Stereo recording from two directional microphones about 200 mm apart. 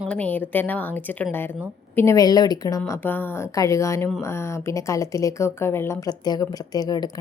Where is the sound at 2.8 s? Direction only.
10° left (ahead or behind).